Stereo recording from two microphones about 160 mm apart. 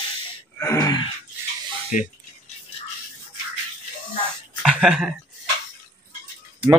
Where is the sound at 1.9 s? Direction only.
50° left (ahead or behind).